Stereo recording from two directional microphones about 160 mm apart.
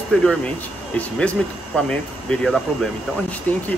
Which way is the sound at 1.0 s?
10° left (ahead or behind).